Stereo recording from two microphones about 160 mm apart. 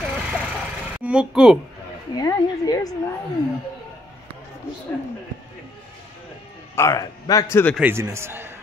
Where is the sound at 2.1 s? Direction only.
20° left (ahead or behind).